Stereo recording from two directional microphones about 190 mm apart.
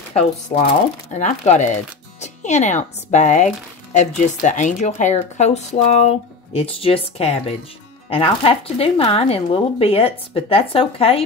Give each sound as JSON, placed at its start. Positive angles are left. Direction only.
{"t": 0.5, "sound": "speech", "side_deg": 45}